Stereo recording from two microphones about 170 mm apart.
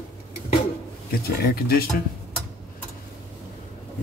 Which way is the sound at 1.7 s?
65° left (ahead or behind).